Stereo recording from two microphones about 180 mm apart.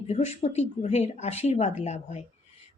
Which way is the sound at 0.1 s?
40° left (ahead or behind).